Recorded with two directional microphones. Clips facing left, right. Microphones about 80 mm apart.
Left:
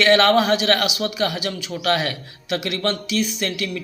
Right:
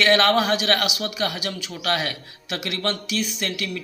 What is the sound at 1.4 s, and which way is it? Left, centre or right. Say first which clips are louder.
A man's voice: left 4 dB; left.